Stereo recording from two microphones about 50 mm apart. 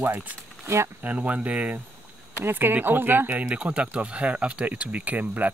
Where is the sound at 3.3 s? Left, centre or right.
Right.